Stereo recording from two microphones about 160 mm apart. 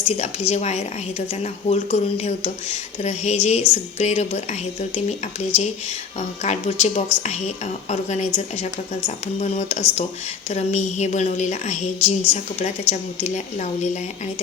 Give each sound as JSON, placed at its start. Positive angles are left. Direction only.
{"t": 0.1, "sound": "a woman's voice", "side_deg": 40}
{"t": 6.1, "sound": "a woman's voice", "side_deg": 45}